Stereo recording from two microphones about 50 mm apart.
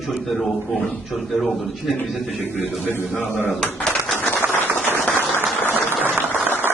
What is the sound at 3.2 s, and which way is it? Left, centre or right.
Speech, left.